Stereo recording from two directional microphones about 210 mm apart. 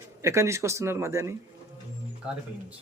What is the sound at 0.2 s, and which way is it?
Speech, 15° right (ahead or behind).